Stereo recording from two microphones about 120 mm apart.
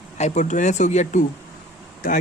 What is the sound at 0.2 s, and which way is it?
Speech, 75° left (ahead or behind).